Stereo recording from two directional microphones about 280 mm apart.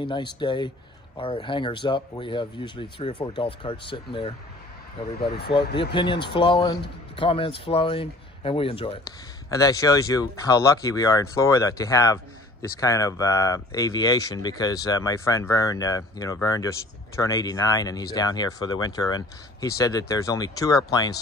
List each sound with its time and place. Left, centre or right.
0.0 s speech: centre
6.2 s speech: centre